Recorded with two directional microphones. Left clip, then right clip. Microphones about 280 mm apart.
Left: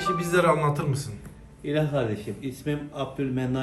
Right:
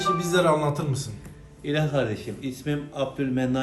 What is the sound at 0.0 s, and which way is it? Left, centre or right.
A man's voice, centre.